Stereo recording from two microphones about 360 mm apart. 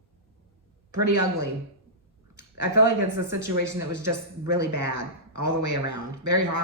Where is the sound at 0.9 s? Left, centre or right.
Right.